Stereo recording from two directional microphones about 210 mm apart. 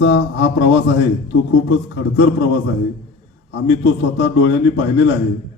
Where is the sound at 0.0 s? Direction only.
55° left (ahead or behind).